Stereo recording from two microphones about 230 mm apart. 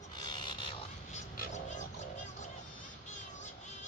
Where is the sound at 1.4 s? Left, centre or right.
Left.